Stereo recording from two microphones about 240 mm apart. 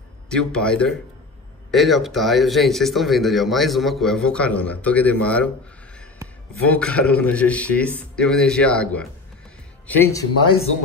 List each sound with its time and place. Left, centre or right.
0.3 s speech: centre
6.7 s speech: centre